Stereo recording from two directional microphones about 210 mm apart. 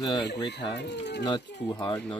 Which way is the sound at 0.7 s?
55° left (ahead or behind).